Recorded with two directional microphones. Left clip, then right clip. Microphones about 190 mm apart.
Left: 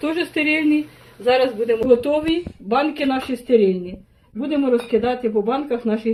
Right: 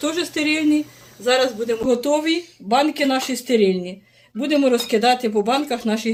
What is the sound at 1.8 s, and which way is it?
Speech, 40° right (ahead or behind).